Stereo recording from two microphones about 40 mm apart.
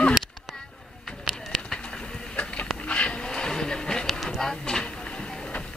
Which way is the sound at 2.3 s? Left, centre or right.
Left.